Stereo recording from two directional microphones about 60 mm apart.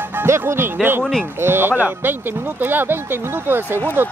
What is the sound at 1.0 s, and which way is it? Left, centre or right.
Speech, centre.